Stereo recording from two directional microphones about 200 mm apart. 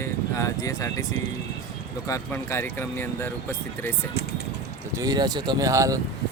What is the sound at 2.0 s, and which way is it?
Speech, 15° left (ahead or behind).